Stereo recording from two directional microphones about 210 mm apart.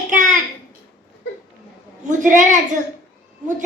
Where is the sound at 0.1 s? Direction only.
35° right (ahead or behind).